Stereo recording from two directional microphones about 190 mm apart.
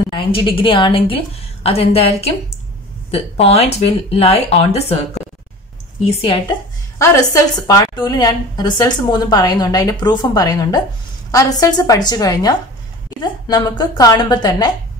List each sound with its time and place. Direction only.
0.1 s a woman's voice: 25° left (ahead or behind)